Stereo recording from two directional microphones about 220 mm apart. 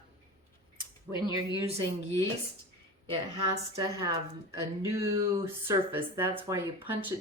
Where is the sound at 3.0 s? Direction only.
20° right (ahead or behind).